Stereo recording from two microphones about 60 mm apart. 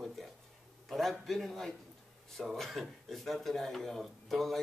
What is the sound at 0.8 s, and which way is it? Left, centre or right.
A man's voice, centre.